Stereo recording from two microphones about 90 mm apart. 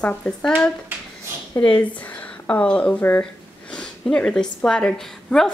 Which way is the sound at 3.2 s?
10° left (ahead or behind).